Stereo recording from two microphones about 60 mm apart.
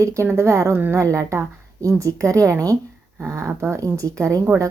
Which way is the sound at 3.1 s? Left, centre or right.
Right.